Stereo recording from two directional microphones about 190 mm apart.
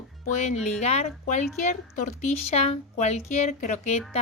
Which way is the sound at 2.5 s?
35° left (ahead or behind).